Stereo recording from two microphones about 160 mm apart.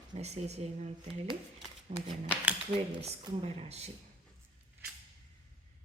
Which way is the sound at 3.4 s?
40° right (ahead or behind).